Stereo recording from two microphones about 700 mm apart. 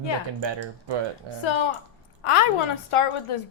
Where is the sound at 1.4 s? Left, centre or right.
Left.